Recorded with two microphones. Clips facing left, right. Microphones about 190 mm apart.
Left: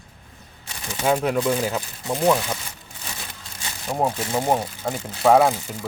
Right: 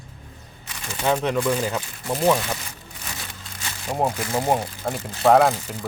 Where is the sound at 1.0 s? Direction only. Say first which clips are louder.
Left 1 dB; 5° left (ahead or behind).